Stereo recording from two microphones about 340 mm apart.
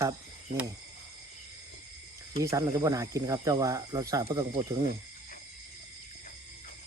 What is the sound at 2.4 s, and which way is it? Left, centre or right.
Speech, centre.